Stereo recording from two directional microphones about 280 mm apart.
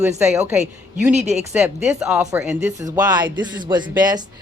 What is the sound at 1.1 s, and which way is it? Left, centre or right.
Speech, right.